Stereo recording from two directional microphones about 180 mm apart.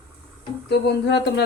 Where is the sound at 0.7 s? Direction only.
65° left (ahead or behind).